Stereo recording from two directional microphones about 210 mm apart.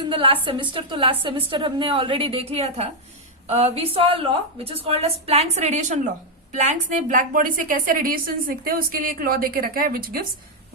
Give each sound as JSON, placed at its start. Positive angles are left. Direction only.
{"t": 0.0, "sound": "a woman's voice", "side_deg": -25}